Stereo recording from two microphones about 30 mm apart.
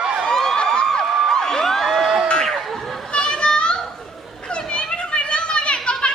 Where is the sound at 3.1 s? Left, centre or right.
Left.